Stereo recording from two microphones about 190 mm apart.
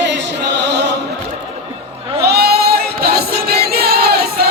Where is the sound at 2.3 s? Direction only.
55° right (ahead or behind).